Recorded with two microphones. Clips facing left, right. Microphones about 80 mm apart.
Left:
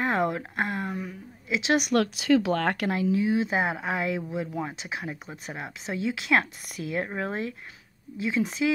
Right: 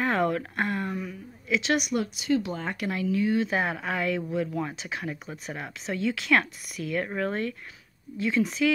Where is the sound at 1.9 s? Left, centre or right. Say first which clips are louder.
Left 4 dB; left.